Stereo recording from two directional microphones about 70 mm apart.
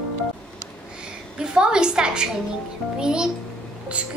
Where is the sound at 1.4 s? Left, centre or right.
Centre.